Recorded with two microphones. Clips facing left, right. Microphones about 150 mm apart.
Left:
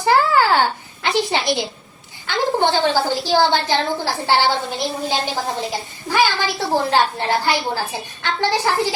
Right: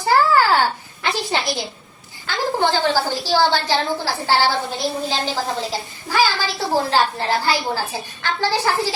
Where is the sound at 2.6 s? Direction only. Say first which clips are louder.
Even; 20° left (ahead or behind).